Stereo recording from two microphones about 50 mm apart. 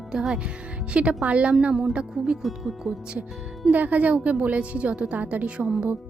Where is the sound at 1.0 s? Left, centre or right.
Right.